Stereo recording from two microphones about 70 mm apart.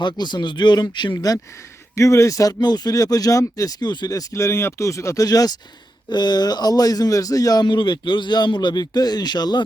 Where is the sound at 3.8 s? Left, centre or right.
Left.